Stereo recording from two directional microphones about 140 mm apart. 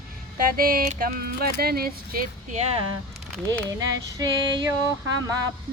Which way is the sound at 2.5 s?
50° right (ahead or behind).